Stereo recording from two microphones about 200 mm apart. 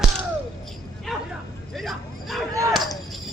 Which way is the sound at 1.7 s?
Centre (ahead or behind).